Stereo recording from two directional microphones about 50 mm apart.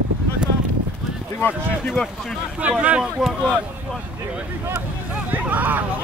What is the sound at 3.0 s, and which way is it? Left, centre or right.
Speech, centre.